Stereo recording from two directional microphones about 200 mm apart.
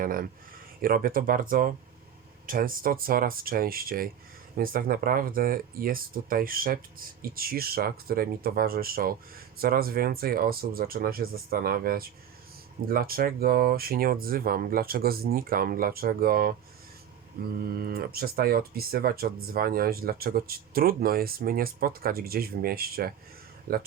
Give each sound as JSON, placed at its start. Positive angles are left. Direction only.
{"t": 0.0, "sound": "speech", "side_deg": -45}
{"t": 17.6, "sound": "speech", "side_deg": -50}